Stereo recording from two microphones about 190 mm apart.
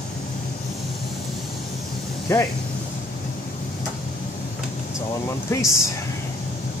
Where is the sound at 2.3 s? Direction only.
15° left (ahead or behind).